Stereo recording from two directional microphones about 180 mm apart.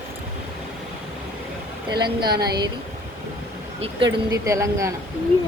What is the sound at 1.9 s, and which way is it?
Speech, 25° right (ahead or behind).